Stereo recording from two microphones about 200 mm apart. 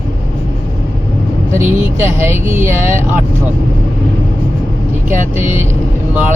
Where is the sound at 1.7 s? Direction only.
10° right (ahead or behind).